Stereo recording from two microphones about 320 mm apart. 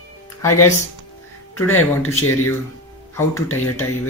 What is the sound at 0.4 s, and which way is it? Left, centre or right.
Speech, left.